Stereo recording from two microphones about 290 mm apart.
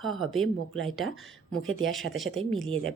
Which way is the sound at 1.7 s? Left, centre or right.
Right.